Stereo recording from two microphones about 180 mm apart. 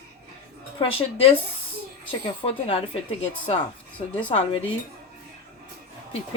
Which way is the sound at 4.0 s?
30° left (ahead or behind).